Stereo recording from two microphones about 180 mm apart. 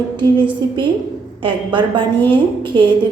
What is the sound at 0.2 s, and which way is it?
A woman's voice, 25° right (ahead or behind).